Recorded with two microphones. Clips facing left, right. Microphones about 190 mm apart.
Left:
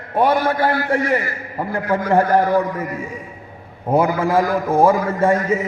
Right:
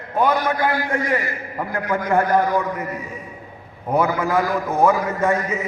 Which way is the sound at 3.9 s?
25° left (ahead or behind).